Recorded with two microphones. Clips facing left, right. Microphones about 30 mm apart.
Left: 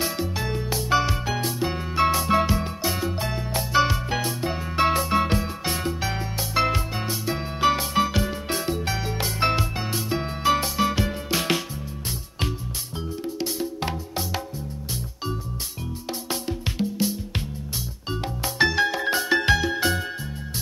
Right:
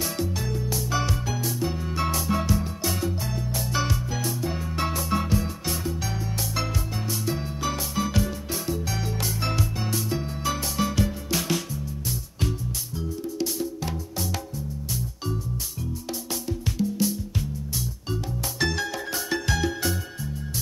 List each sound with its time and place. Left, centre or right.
0.0 s music: left
2.8 s music: left
3.1 s music: left
3.7 s music: left
8.9 s music: left
13.7 s music: left
16.1 s music: left
18.7 s music: left